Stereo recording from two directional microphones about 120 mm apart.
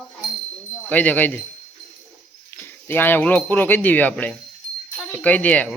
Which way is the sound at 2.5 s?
20° left (ahead or behind).